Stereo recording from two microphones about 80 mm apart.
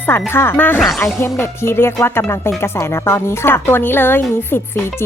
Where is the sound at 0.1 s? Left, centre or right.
Left.